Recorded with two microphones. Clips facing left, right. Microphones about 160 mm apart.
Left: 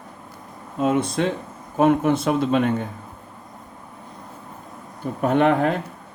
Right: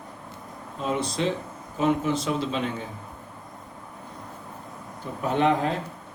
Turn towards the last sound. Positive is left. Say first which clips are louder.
# left 5 dB
turn(degrees=60)  # may be behind; listen again after turning